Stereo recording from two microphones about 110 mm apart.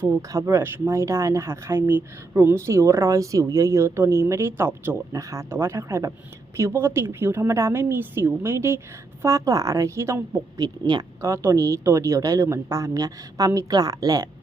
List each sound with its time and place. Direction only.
0.1 s speech: 30° right (ahead or behind)
10.6 s speech: 40° right (ahead or behind)